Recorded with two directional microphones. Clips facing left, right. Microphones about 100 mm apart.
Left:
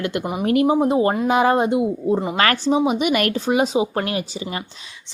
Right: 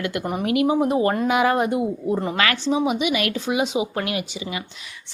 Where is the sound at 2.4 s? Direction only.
40° left (ahead or behind).